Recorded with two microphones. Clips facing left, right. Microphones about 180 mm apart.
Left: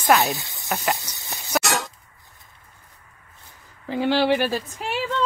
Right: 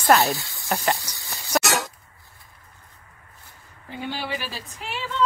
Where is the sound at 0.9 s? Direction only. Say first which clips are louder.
Left 1 dB; 20° left (ahead or behind).